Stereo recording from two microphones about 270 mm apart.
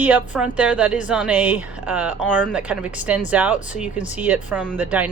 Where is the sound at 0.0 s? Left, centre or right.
Centre.